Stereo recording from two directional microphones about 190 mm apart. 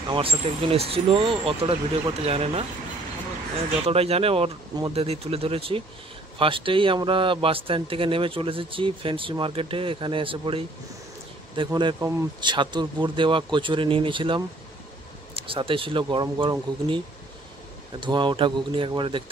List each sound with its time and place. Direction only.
0.1 s speech: 30° right (ahead or behind)
3.8 s speech: 30° right (ahead or behind)
18.0 s speech: 25° right (ahead or behind)